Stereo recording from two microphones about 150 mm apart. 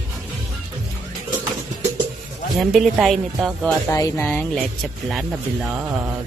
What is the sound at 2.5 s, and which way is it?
Speech, centre (ahead or behind).